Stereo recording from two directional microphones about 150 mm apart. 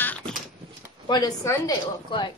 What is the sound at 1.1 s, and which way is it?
A woman's voice, 25° left (ahead or behind).